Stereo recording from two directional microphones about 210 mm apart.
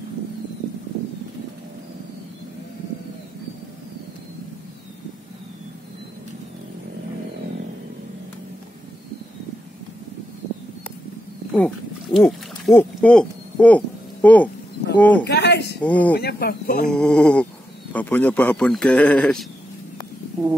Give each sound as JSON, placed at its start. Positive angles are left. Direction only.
{"t": 11.5, "sound": "wild animals", "side_deg": 5}
{"t": 12.7, "sound": "a man's voice", "side_deg": 5}
{"t": 15.2, "sound": "a sound", "side_deg": 50}
{"t": 15.8, "sound": "a man's voice", "side_deg": 5}
{"t": 16.2, "sound": "speech", "side_deg": 50}
{"t": 16.8, "sound": "a sound", "side_deg": 5}
{"t": 17.9, "sound": "a man's voice", "side_deg": 5}